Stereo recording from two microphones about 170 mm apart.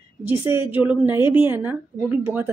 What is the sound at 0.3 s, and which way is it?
Speech, 10° right (ahead or behind).